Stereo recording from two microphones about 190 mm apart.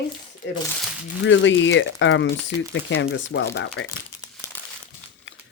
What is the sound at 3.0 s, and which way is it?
Speech, 65° left (ahead or behind).